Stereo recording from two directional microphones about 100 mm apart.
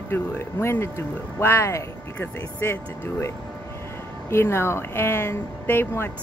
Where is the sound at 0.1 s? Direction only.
25° left (ahead or behind).